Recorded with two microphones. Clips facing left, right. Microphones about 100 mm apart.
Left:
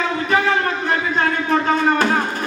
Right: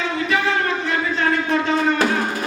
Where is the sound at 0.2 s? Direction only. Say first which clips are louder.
Left 2 dB; 40° left (ahead or behind).